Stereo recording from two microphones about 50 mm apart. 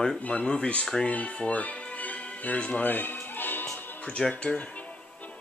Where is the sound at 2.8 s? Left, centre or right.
Left.